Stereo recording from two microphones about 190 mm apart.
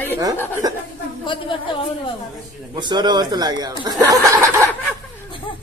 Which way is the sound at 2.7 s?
25° right (ahead or behind).